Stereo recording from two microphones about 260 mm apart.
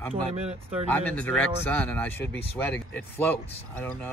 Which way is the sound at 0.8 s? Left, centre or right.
Centre.